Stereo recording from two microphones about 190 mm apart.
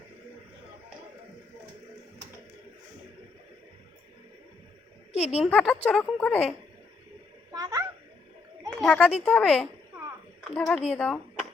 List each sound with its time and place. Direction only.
5.1 s a woman's voice: 35° left (ahead or behind)
5.5 s a woman's voice: 10° left (ahead or behind)
7.5 s a sound: 20° right (ahead or behind)
8.8 s a woman's voice: 5° left (ahead or behind)